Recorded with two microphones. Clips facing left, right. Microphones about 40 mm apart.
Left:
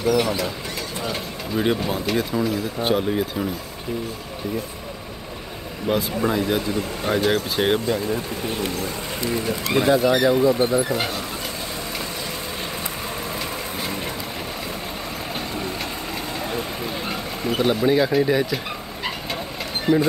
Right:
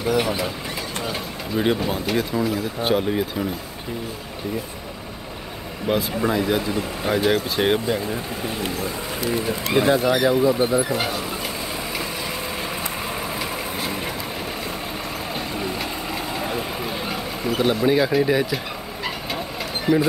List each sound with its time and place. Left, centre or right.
0.0 s speech: centre
1.0 s speech: centre
5.9 s speech: centre
7.8 s speech: centre
9.4 s speech: centre
10.0 s speech: centre
13.4 s vehicle: centre
15.3 s vehicle: centre
19.9 s speech: centre